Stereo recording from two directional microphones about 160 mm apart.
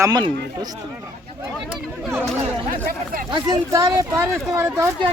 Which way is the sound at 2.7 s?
60° right (ahead or behind).